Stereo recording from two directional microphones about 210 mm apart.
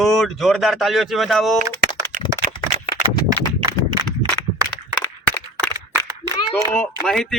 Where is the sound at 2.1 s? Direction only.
40° right (ahead or behind).